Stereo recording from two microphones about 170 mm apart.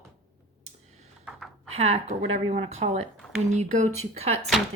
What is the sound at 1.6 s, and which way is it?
Speech, 35° right (ahead or behind).